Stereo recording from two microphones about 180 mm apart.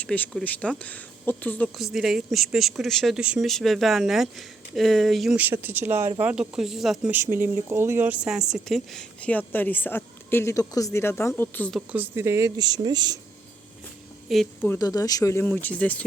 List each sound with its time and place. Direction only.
0.0 s speech: 5° left (ahead or behind)
11.9 s speech: 10° right (ahead or behind)
14.6 s speech: 15° left (ahead or behind)